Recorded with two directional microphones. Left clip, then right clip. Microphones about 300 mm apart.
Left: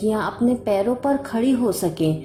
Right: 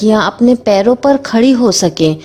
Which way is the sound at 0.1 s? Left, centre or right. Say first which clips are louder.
Right 14 dB; right.